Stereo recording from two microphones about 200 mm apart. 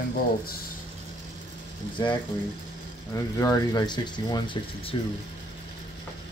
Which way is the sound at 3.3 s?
20° left (ahead or behind).